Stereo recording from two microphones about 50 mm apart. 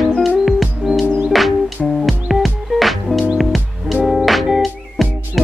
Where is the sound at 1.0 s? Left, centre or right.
Right.